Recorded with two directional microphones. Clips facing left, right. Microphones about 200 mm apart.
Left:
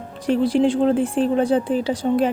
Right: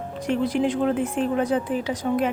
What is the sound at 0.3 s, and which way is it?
Speech, 30° left (ahead or behind).